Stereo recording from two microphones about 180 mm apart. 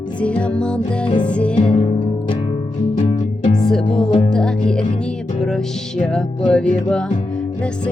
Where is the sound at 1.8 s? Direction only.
30° left (ahead or behind).